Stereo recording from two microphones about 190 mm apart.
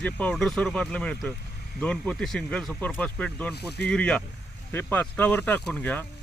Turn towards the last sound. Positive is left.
turn(degrees=10)  # may be behind; listen again after turning